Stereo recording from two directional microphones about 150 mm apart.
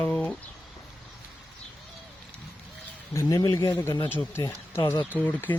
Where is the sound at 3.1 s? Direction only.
20° left (ahead or behind).